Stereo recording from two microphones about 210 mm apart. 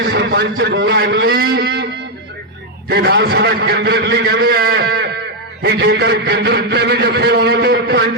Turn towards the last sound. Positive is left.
turn(degrees=-50)  # may be behind; listen again after turning